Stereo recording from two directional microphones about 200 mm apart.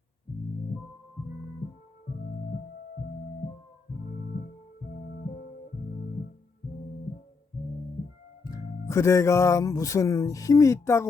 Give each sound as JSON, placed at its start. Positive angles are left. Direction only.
{"t": 8.4, "sound": "speech", "side_deg": 15}